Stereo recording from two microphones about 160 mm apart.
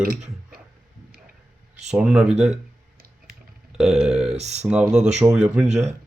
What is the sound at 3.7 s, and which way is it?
Speech, centre (ahead or behind).